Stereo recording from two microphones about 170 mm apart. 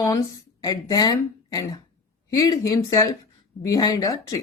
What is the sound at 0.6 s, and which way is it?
Speech, 20° left (ahead or behind).